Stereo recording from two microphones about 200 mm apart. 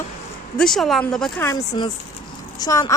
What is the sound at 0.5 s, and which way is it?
Speech, centre (ahead or behind).